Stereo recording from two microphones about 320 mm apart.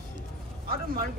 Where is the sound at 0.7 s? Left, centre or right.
Right.